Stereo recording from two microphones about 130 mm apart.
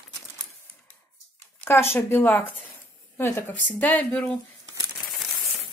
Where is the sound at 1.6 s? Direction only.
20° left (ahead or behind).